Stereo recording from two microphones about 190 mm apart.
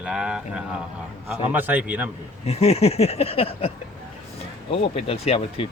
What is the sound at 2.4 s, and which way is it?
Speech, 35° left (ahead or behind).